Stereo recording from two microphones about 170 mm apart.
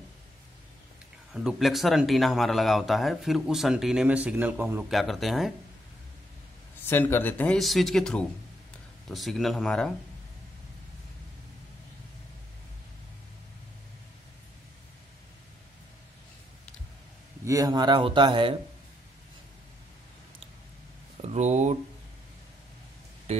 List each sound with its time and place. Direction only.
1.3 s speech: 5° right (ahead or behind)
4.9 s speech: centre (ahead or behind)
6.9 s speech: 10° left (ahead or behind)
17.5 s a man's voice: 20° right (ahead or behind)
21.2 s speech: 40° right (ahead or behind)